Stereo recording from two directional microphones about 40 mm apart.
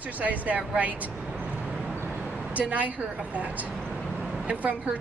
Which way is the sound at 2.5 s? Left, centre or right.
Right.